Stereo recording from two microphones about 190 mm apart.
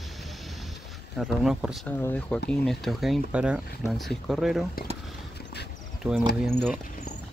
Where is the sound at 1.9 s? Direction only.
10° left (ahead or behind).